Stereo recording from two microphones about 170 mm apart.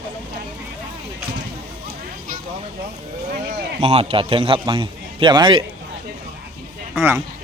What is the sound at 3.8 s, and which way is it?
A man's voice, 35° right (ahead or behind).